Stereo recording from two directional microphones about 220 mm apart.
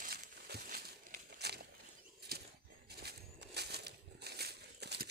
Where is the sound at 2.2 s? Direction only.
45° right (ahead or behind).